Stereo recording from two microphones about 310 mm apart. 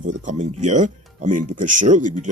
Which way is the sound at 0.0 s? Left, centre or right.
Right.